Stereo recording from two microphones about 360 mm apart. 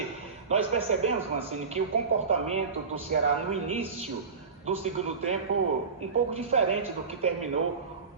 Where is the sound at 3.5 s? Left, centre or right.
Centre.